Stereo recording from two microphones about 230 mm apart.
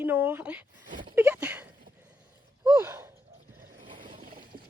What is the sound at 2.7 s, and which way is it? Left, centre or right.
Gasp, centre.